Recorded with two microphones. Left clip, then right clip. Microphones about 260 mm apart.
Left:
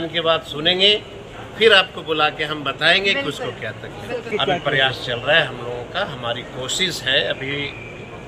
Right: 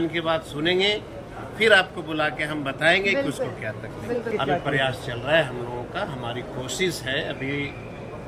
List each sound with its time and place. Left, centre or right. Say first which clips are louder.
0.1 s a man's voice: left 6 dB; centre